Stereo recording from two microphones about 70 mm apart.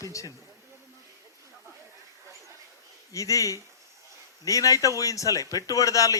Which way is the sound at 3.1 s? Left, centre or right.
Left.